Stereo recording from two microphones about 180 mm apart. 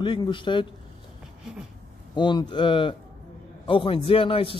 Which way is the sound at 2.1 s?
25° left (ahead or behind).